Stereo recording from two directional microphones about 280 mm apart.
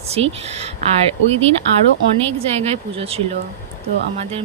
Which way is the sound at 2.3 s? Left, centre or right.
Right.